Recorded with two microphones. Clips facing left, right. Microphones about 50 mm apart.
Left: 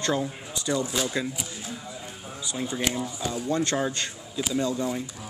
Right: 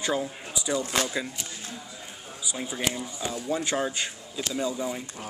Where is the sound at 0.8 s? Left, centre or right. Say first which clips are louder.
Right 1 dB; right.